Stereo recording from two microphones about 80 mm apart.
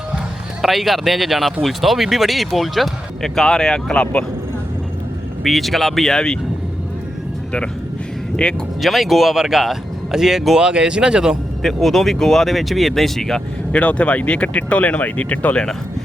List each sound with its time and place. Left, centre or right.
0.6 s speech: centre
5.4 s speech: centre
8.4 s speech: centre
8.8 s speech: centre
11.6 s speech: centre
13.7 s speech: centre